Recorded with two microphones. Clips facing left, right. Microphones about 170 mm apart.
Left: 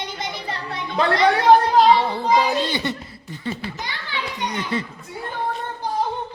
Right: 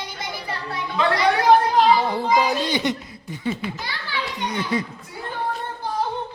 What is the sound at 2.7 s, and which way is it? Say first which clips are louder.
Speech: right 2 dB; 15° right (ahead or behind).